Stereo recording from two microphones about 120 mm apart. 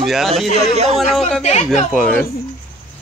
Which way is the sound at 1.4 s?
70° left (ahead or behind).